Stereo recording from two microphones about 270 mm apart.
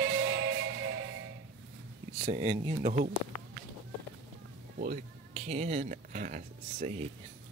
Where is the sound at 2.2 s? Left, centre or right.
Centre.